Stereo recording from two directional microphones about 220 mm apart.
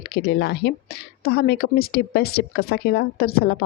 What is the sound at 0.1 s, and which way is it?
Speech, 45° left (ahead or behind).